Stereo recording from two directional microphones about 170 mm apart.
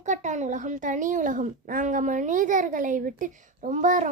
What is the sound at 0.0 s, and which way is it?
A child's voice, 45° right (ahead or behind).